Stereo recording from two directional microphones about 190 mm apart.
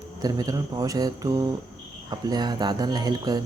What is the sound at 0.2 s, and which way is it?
Speech, 20° right (ahead or behind).